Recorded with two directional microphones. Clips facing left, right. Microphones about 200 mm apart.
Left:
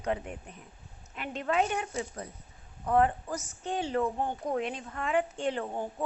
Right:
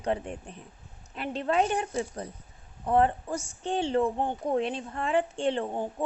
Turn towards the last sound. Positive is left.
turn(degrees=-20)  # may be behind; listen again after turning